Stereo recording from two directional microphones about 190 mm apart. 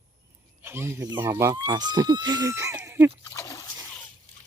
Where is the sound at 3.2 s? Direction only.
15° left (ahead or behind).